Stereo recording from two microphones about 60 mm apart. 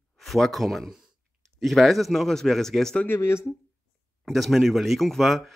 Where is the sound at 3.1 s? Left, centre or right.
Left.